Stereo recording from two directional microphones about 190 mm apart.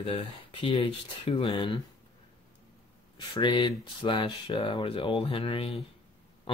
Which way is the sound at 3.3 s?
25° left (ahead or behind).